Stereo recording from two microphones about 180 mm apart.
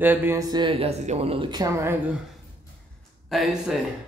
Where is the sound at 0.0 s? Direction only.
10° right (ahead or behind).